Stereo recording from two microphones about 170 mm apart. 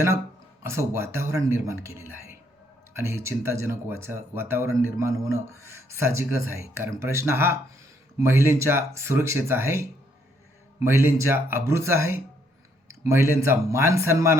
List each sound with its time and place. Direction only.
0.6 s speech: 15° right (ahead or behind)
10.8 s speech: 15° right (ahead or behind)